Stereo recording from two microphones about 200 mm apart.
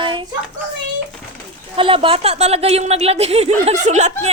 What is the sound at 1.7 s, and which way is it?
A woman's voice, 25° right (ahead or behind).